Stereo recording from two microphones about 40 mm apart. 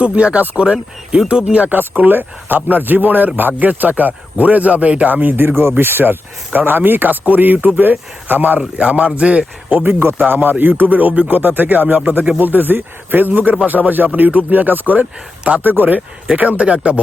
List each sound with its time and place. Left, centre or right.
0.0 s speech: right
1.6 s speech: right
5.0 s speech: right
8.5 s speech: right
9.9 s a man's voice: right
10.2 s speech: right
11.3 s speech: right
16.0 s speech: right